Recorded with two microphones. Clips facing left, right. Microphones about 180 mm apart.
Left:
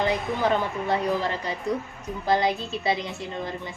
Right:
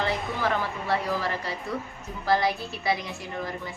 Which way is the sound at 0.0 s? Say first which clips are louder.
Left 3 dB; 20° left (ahead or behind).